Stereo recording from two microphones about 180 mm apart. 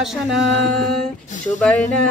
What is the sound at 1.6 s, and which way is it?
Speech, 5° left (ahead or behind).